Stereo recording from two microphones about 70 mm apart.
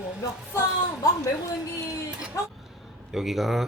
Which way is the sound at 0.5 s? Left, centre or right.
Left.